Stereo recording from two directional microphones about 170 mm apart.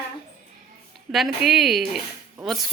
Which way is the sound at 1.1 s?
Centre (ahead or behind).